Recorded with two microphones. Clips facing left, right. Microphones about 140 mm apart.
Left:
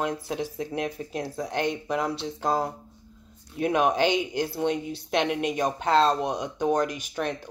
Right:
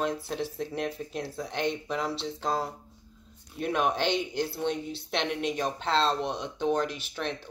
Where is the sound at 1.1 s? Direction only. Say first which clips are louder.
Left 4 dB; 55° left (ahead or behind).